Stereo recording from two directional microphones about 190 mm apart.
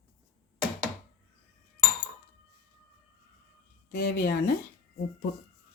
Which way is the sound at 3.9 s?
50° left (ahead or behind).